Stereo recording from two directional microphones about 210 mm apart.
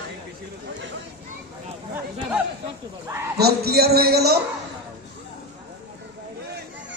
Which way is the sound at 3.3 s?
50° right (ahead or behind).